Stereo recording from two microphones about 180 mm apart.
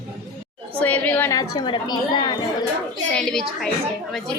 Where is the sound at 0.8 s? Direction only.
10° left (ahead or behind).